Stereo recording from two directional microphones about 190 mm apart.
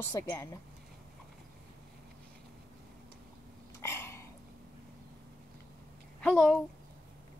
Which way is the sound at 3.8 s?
15° left (ahead or behind).